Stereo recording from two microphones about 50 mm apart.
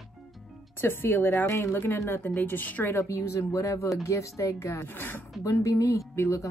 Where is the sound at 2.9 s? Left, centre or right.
Left.